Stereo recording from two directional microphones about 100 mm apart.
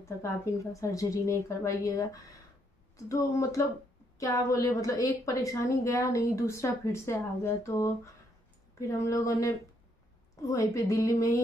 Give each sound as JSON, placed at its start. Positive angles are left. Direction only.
{"t": 0.2, "sound": "a woman's voice", "side_deg": 30}